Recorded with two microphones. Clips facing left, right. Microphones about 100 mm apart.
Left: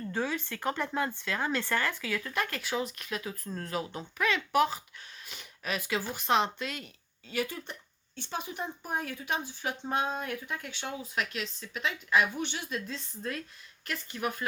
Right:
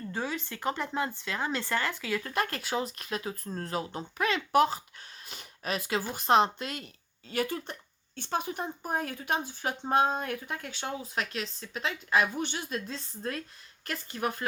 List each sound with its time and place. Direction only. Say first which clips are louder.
0.1 s speech: left 2 dB; 10° right (ahead or behind)
0.3 s speech: even; 20° right (ahead or behind)
2.2 s speech: right 2 dB; 40° right (ahead or behind)